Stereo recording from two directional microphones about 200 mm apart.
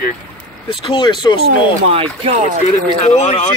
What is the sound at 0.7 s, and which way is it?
Speech, 25° left (ahead or behind).